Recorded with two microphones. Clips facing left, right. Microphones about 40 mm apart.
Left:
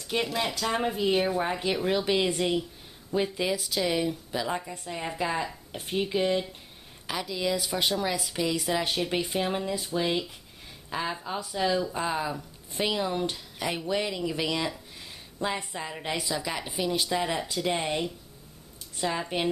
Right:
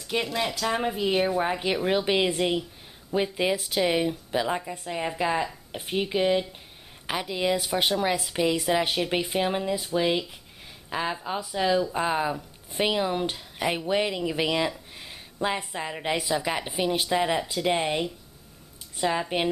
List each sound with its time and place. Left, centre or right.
0.0 s a woman's voice: centre
7.1 s a woman's voice: right